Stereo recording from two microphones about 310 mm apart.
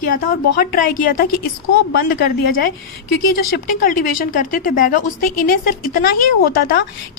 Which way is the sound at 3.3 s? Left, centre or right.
Left.